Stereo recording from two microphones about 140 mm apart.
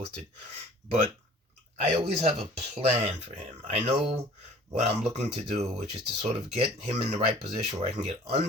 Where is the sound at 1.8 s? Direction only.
50° right (ahead or behind).